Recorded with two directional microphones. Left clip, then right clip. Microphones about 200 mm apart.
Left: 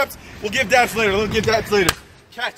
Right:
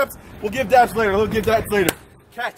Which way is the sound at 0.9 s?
25° right (ahead or behind).